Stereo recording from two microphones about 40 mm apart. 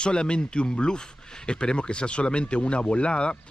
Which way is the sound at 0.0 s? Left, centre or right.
Left.